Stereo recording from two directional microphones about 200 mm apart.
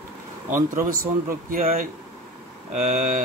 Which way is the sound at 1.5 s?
45° right (ahead or behind).